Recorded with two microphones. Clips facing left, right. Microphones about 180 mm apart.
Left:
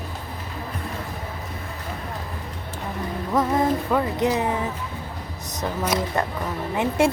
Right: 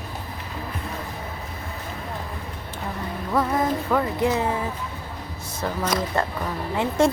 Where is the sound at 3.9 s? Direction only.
20° left (ahead or behind).